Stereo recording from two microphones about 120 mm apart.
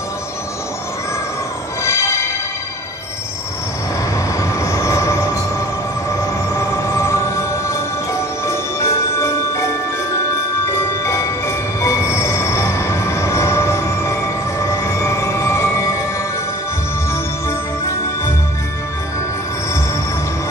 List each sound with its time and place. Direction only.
1.8 s music: 25° left (ahead or behind)
4.4 s train: 25° left (ahead or behind)
6.5 s music: 25° left (ahead or behind)
10.7 s music: 25° left (ahead or behind)
17.1 s music: 25° left (ahead or behind)